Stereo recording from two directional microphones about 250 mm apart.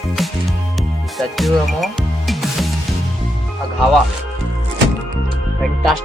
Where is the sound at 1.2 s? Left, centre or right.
Centre.